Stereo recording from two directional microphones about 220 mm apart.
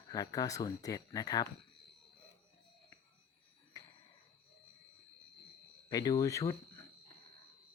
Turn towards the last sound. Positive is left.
turn(degrees=15)  # may be behind; listen again after turning